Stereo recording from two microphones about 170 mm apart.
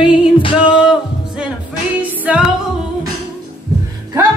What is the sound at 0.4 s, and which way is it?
Music, 30° left (ahead or behind).